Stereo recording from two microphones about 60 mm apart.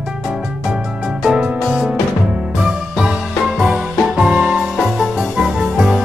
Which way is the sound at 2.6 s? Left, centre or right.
Centre.